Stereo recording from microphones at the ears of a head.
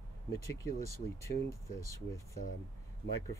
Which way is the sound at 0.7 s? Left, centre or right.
Right.